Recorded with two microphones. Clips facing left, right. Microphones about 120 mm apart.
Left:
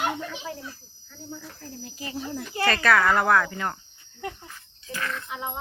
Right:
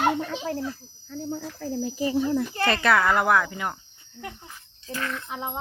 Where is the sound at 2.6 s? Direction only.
20° right (ahead or behind).